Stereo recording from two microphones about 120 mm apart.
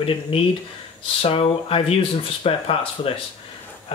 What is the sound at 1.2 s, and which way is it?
Speech, 50° left (ahead or behind).